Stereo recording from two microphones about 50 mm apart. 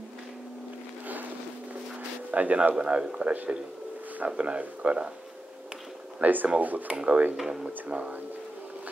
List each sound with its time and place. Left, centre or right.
2.3 s speech: right
2.8 s speech: centre
4.4 s speech: right
6.2 s speech: right
7.3 s speech: centre
7.9 s speech: right